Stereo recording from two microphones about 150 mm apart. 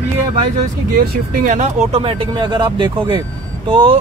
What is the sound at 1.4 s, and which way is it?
Speech, 50° right (ahead or behind).